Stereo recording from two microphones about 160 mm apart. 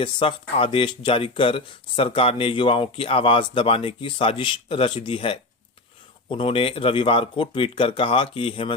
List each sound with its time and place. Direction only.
0.0 s speech: 35° left (ahead or behind)